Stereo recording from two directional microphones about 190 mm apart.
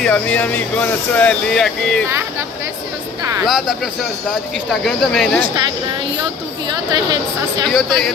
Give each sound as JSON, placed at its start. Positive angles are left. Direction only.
{"t": 0.0, "sound": "speech", "side_deg": 5}
{"t": 3.4, "sound": "speech", "side_deg": 0}
{"t": 6.7, "sound": "speech", "side_deg": -20}
{"t": 7.6, "sound": "speech", "side_deg": 0}